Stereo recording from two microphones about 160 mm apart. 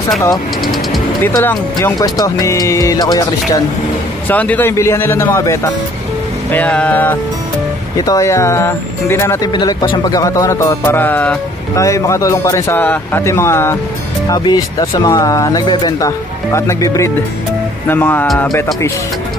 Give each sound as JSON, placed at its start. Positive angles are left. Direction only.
{"t": 1.2, "sound": "speech", "side_deg": 15}
{"t": 4.3, "sound": "a man's voice", "side_deg": 10}
{"t": 8.0, "sound": "a man's voice", "side_deg": 20}
{"t": 9.5, "sound": "a man's voice", "side_deg": 25}